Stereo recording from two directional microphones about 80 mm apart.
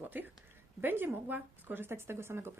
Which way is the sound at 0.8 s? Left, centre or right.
Right.